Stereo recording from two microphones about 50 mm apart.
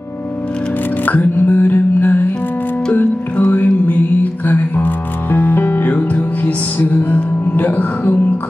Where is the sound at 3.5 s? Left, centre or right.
Left.